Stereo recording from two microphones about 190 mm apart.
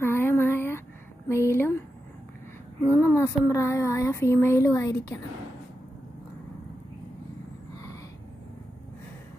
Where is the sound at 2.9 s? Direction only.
15° left (ahead or behind).